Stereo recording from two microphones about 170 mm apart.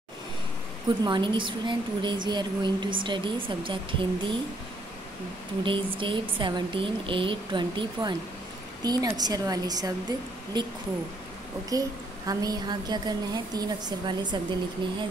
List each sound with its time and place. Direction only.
0.8 s speech: 25° right (ahead or behind)
5.6 s speech: 30° right (ahead or behind)
11.7 s speech: 20° right (ahead or behind)